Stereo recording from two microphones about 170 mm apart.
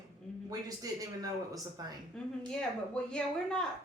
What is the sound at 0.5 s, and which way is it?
A man's voice, 20° right (ahead or behind).